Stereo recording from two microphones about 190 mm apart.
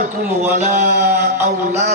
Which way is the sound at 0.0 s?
40° right (ahead or behind).